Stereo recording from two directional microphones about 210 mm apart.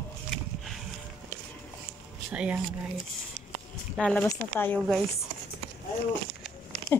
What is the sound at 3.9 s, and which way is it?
Speech, 5° left (ahead or behind).